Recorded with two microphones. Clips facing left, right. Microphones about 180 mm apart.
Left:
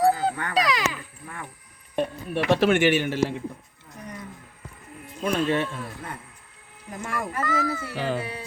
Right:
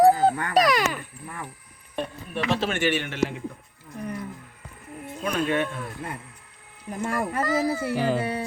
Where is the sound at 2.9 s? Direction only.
40° left (ahead or behind).